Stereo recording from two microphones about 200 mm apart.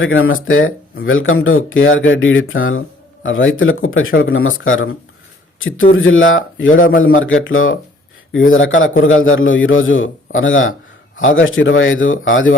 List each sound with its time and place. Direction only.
0.0 s speech: 75° left (ahead or behind)
3.2 s a man's voice: 75° left (ahead or behind)